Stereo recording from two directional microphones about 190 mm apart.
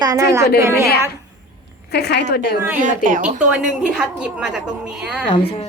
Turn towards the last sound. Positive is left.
turn(degrees=-5)  # may be behind; listen again after turning